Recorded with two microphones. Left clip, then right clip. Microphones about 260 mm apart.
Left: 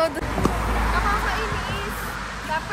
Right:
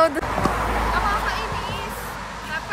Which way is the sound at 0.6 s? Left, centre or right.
Right.